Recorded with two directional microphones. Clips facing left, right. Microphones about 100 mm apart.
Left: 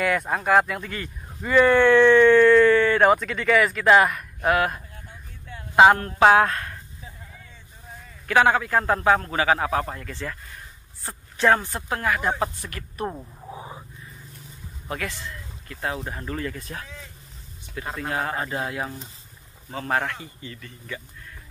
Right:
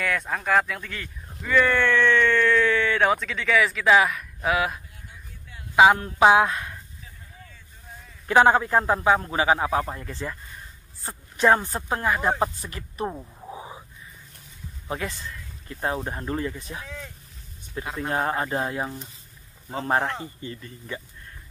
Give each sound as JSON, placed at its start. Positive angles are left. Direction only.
{"t": 0.0, "sound": "speech", "side_deg": 10}
{"t": 5.8, "sound": "a man's voice", "side_deg": -5}
{"t": 8.3, "sound": "a man's voice", "side_deg": -25}
{"t": 11.3, "sound": "speech", "side_deg": -20}
{"t": 13.0, "sound": "speech", "side_deg": 0}
{"t": 13.5, "sound": "a sound", "side_deg": -15}
{"t": 15.7, "sound": "speech", "side_deg": -25}
{"t": 17.9, "sound": "speech", "side_deg": -30}
{"t": 19.7, "sound": "speech", "side_deg": -30}